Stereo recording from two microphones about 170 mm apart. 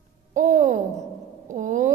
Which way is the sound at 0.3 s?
50° right (ahead or behind).